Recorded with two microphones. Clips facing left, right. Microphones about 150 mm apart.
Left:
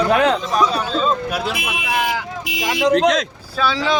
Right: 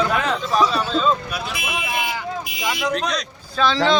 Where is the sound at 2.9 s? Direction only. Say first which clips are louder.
Left 9 dB; 90° left.